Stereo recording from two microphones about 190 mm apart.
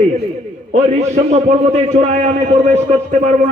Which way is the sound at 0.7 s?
35° right (ahead or behind).